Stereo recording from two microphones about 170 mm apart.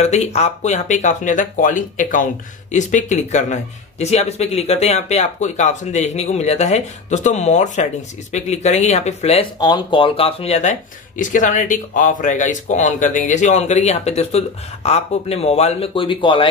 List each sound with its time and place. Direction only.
0.0 s speech: 40° left (ahead or behind)
9.6 s speech: 25° left (ahead or behind)